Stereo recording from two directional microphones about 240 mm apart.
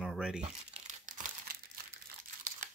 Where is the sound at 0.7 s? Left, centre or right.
Right.